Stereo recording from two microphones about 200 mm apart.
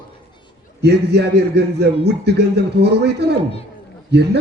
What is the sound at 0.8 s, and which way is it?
A man's voice, 55° right (ahead or behind).